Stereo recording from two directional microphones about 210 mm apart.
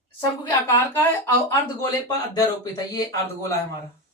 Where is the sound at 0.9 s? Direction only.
10° left (ahead or behind).